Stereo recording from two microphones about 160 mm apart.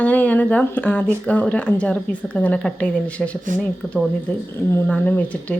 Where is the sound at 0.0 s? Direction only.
10° left (ahead or behind).